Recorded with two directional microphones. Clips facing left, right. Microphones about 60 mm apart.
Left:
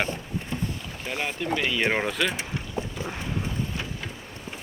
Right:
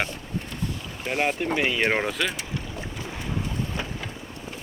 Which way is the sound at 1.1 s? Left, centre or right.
Right.